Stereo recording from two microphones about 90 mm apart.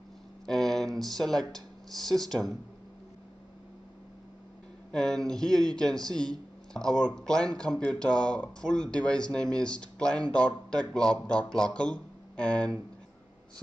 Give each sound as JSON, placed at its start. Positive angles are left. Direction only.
{"t": 0.5, "sound": "speech", "side_deg": 5}
{"t": 4.9, "sound": "speech", "side_deg": 10}